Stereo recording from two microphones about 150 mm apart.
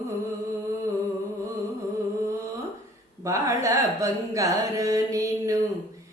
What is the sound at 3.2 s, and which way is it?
Music, 20° right (ahead or behind).